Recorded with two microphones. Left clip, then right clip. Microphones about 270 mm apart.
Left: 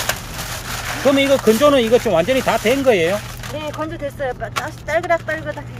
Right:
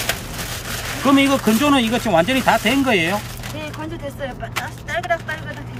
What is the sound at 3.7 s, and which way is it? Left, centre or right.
Speech, centre.